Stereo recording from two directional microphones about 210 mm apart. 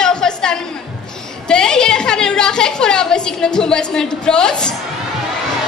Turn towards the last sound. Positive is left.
turn(degrees=5)  # may be behind; listen again after turning